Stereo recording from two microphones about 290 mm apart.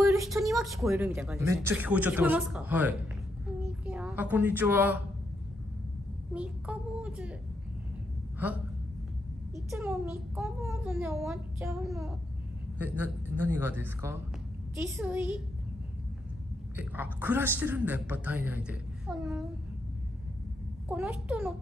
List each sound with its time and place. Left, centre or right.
0.3 s a sound: centre
0.7 s a man's voice: centre
6.3 s a man's voice: centre
9.7 s a child's voice: centre
16.7 s a man's voice: centre
20.9 s a man's voice: centre